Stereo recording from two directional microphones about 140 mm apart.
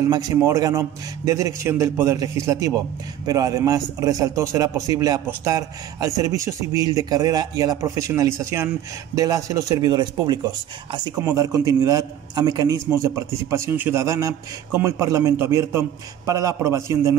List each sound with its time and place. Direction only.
0.1 s a man's voice: 25° right (ahead or behind)